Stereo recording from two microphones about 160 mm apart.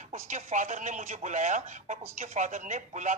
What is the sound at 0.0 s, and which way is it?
Speech, 50° right (ahead or behind).